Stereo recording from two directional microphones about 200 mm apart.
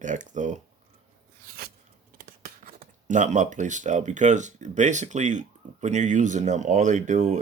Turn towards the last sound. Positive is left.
turn(degrees=-35)  # may be behind; listen again after turning